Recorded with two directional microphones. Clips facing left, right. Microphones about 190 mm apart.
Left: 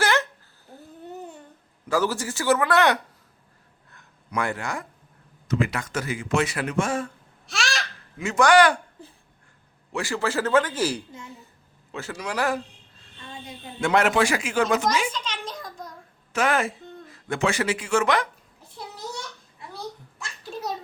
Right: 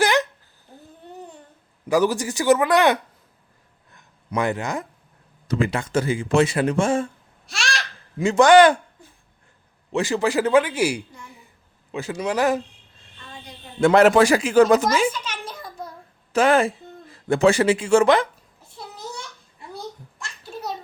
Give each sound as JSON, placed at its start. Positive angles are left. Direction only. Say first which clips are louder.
{"t": 0.0, "sound": "a sound", "louder": "right 4 dB", "side_deg": -15}
{"t": 1.9, "sound": "speech", "louder": "right 5 dB", "side_deg": -15}
{"t": 4.3, "sound": "speech", "louder": "right 4 dB", "side_deg": -20}
{"t": 5.5, "sound": "speech", "louder": "right 3 dB", "side_deg": -30}
{"t": 7.4, "sound": "babbling", "louder": "even", "side_deg": 0}
{"t": 8.2, "sound": "speech", "louder": "right 5 dB", "side_deg": -25}
{"t": 9.9, "sound": "speech", "louder": "right 5 dB", "side_deg": -20}
{"t": 13.8, "sound": "speech", "louder": "right 7 dB", "side_deg": -35}
{"t": 15.1, "sound": "a sound", "louder": "even", "side_deg": -5}
{"t": 16.3, "sound": "speech", "louder": "right 6 dB", "side_deg": -30}
{"t": 20.1, "sound": "a sound", "louder": "even", "side_deg": 0}